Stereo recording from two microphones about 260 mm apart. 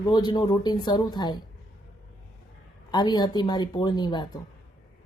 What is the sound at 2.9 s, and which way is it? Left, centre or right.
Speech, centre.